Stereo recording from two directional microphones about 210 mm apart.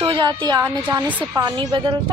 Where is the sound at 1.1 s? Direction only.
5° right (ahead or behind).